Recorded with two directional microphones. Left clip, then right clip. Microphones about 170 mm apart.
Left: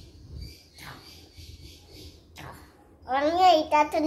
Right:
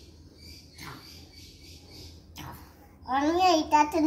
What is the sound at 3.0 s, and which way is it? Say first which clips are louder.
A child's voice: left 3 dB; 25° left (ahead or behind).